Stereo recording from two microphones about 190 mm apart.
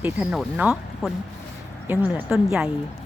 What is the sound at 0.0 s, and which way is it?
Speech, 5° right (ahead or behind).